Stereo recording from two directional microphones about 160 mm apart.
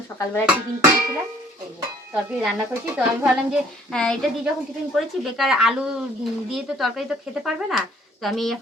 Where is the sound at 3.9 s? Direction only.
5° left (ahead or behind).